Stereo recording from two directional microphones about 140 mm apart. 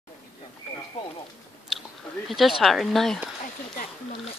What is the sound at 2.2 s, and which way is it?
Speech, centre (ahead or behind).